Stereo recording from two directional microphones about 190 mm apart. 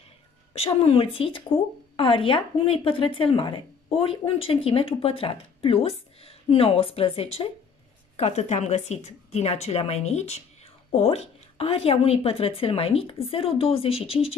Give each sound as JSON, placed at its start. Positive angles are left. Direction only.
{"t": 0.6, "sound": "a woman's voice", "side_deg": 30}